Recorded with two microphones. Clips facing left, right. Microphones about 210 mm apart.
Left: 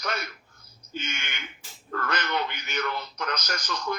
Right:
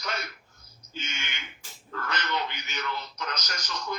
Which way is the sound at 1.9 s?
55° left (ahead or behind).